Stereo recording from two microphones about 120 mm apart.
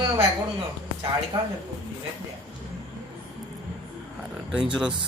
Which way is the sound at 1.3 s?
40° right (ahead or behind).